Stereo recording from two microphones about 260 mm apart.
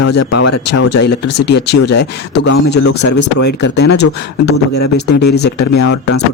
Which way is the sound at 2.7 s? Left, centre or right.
Left.